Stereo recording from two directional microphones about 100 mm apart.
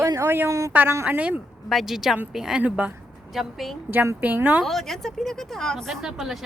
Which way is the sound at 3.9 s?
20° right (ahead or behind).